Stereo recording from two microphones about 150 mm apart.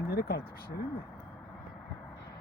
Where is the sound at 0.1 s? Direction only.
90° left.